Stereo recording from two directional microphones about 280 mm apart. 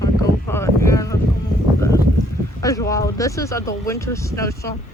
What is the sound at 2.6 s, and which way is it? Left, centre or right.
Speech, centre.